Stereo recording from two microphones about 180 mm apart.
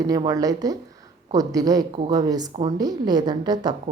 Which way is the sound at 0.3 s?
20° right (ahead or behind).